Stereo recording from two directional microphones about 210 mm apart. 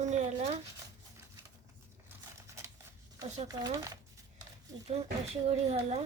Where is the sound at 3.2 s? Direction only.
35° right (ahead or behind).